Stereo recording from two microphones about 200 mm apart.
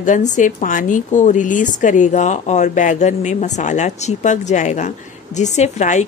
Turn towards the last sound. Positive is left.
turn(degrees=35)  # may be behind; listen again after turning